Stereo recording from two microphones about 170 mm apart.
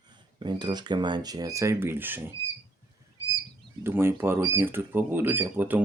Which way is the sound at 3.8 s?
15° right (ahead or behind).